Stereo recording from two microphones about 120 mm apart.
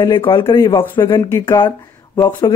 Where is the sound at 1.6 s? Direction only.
35° left (ahead or behind).